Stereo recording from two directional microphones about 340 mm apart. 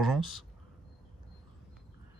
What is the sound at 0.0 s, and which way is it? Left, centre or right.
Speech, centre.